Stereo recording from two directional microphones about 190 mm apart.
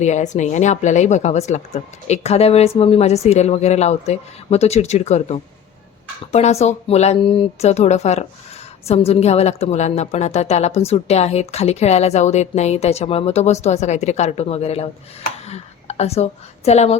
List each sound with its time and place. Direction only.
0.0 s a woman's voice: 40° left (ahead or behind)